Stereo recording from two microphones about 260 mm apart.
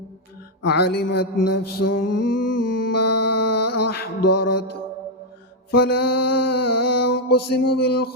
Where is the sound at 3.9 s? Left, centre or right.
Left.